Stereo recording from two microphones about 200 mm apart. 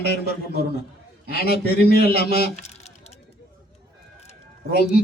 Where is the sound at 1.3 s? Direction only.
50° left (ahead or behind).